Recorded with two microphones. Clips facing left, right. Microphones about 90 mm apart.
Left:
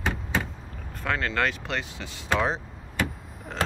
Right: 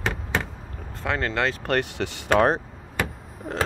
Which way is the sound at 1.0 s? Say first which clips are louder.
Right 2 dB; 25° right (ahead or behind).